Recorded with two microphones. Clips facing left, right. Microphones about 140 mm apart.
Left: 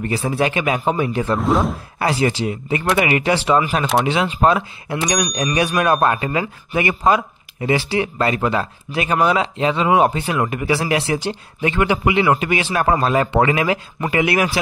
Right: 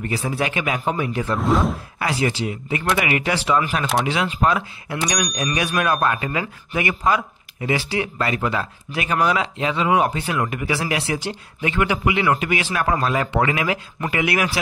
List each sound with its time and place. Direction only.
0.0 s speech: 30° left (ahead or behind)
1.4 s speech: centre (ahead or behind)
2.0 s speech: 30° left (ahead or behind)